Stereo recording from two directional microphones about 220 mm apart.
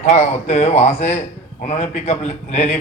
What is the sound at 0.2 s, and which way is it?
A man's voice, 30° left (ahead or behind).